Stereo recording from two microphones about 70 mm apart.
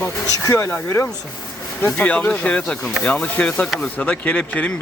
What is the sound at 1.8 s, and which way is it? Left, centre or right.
Speech, left.